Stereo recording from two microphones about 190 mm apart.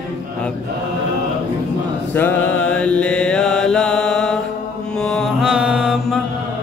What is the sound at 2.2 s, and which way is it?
Mantra, 10° left (ahead or behind).